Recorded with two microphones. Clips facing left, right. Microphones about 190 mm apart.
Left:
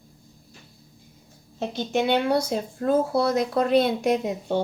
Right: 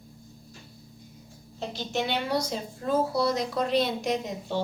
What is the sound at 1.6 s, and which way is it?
Speech, 55° left (ahead or behind).